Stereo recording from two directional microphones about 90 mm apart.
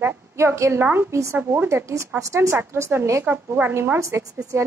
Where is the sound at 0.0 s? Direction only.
25° right (ahead or behind).